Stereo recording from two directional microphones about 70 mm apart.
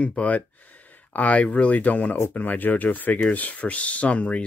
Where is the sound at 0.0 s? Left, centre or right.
Centre.